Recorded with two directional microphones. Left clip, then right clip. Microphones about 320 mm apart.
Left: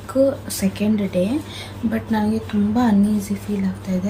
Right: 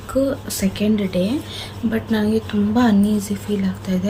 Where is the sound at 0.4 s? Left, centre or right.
Centre.